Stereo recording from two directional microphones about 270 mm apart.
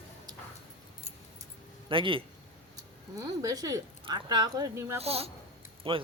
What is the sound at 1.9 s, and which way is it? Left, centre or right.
Speech, centre.